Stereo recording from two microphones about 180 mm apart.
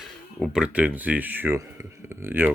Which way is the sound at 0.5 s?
5° right (ahead or behind).